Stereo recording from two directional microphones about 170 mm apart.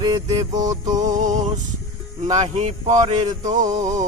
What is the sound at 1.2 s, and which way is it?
Music, 45° right (ahead or behind).